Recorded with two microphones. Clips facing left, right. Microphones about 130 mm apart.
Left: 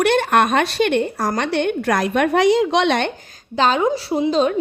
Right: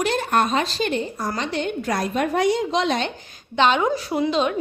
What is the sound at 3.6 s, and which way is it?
Speech, 35° left (ahead or behind).